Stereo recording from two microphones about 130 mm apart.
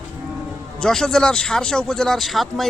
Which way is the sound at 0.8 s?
5° left (ahead or behind).